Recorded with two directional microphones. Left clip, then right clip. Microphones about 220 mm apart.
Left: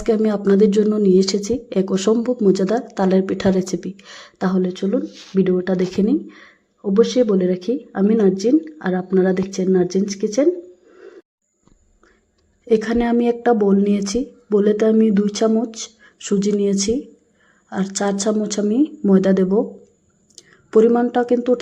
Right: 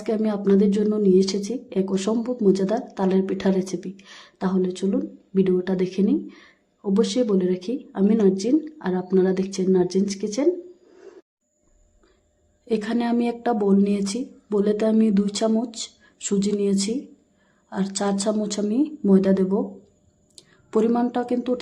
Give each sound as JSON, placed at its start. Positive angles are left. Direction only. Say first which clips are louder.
{"t": 0.0, "sound": "speech", "louder": "left 6 dB", "side_deg": 15}
{"t": 12.6, "sound": "speech", "louder": "left 7 dB", "side_deg": 15}